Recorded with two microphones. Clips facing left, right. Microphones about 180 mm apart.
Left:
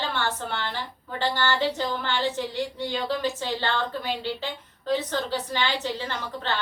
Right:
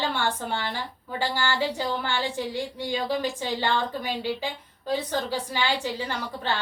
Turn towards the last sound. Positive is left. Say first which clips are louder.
# right 1 dB
turn(degrees=-10)  # may be behind; listen again after turning